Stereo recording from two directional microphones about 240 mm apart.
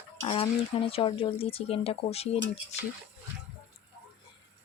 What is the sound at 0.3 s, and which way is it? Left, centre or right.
Speech, left.